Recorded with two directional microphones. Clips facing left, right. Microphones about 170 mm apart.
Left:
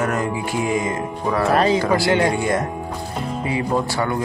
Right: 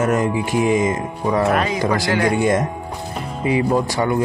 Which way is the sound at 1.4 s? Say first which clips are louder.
Left 6 dB; 35° left (ahead or behind).